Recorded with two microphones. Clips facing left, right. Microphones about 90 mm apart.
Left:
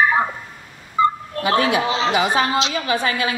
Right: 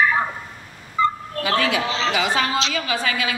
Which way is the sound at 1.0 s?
25° left (ahead or behind).